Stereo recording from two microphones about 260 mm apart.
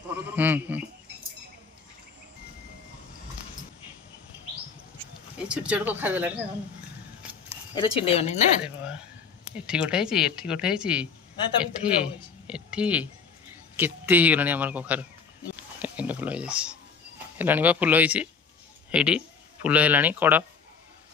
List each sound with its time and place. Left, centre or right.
0.1 s speech: centre
5.5 s speech: centre
7.7 s speech: centre
8.6 s a man's voice: centre
15.5 s a sound: centre
17.4 s a man's voice: centre